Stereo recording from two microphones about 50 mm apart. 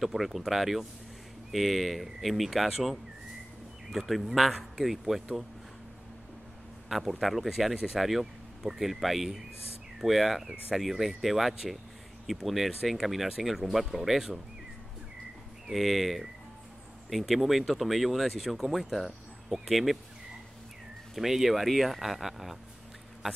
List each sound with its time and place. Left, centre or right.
0.0 s speech: centre
6.9 s speech: centre
15.7 s speech: centre
21.1 s speech: centre